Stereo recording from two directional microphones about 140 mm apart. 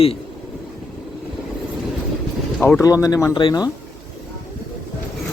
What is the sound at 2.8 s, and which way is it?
Speech, 25° left (ahead or behind).